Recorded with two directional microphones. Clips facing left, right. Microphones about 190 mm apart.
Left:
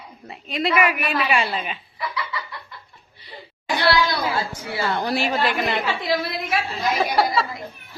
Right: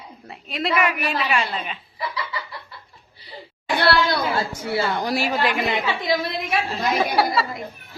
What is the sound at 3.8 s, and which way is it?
Speech, 60° right (ahead or behind).